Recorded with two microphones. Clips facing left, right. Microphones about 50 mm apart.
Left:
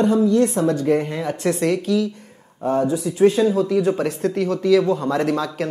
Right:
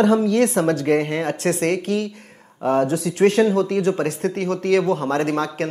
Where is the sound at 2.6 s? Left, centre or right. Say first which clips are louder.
Right 1 dB; right.